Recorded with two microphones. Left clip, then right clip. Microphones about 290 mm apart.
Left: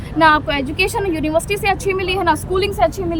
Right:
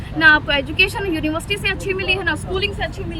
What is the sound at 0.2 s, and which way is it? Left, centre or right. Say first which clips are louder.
Speech: even; centre.